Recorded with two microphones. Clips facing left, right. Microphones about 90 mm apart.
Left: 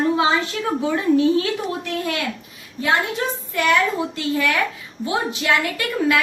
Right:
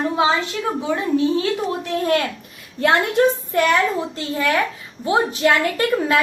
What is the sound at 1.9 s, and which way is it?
Speech, 40° right (ahead or behind).